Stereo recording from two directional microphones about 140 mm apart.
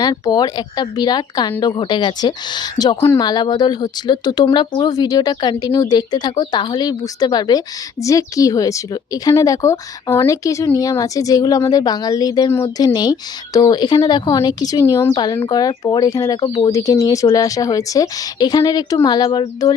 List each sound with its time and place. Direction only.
0.0 s speech: 30° left (ahead or behind)